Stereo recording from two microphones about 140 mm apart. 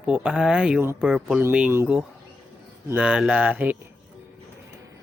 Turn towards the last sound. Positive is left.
turn(degrees=-10)  # may be behind; listen again after turning